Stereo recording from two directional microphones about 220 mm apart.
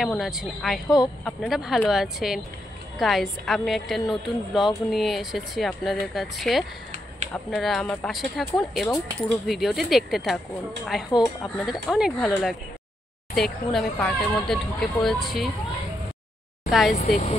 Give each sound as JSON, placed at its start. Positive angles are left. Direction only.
{"t": 0.0, "sound": "a woman's voice", "side_deg": 0}
{"t": 0.8, "sound": "speech", "side_deg": 20}
{"t": 1.2, "sound": "a woman's voice", "side_deg": 0}
{"t": 16.9, "sound": "speech", "side_deg": 35}